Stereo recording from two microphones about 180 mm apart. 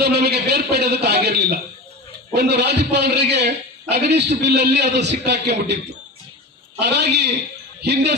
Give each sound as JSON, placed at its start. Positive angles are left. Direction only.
{"t": 0.0, "sound": "a man's voice", "side_deg": -65}